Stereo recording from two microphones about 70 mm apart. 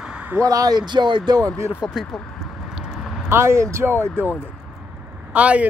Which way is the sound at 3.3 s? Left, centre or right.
Right.